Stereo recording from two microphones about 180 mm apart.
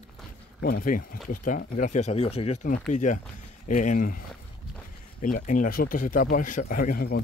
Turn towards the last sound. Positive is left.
turn(degrees=50)  # may be behind; listen again after turning